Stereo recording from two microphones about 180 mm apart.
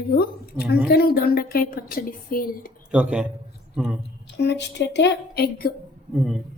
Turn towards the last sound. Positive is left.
turn(degrees=0)  # may be behind; listen again after turning